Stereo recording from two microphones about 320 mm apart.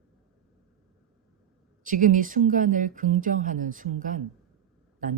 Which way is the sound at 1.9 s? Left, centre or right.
Right.